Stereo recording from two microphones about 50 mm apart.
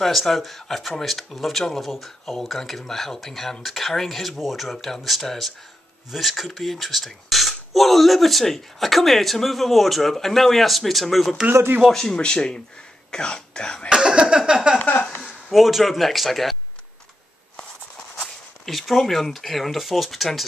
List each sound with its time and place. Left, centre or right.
0.0 s speech: centre
11.9 s speech: centre
13.8 s a sound: centre
15.5 s speech: centre
18.7 s speech: centre